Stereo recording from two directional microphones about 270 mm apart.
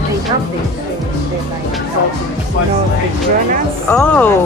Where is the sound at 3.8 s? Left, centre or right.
Centre.